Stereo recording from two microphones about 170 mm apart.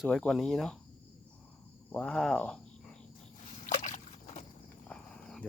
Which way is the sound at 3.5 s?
45° left (ahead or behind).